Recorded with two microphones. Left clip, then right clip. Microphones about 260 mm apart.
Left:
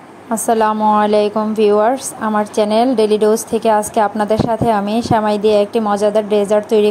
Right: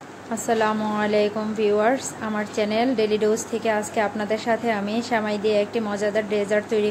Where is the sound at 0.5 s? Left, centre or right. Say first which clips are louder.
Left 9 dB; left.